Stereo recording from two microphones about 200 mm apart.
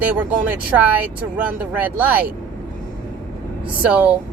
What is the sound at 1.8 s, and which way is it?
Speech, 10° right (ahead or behind).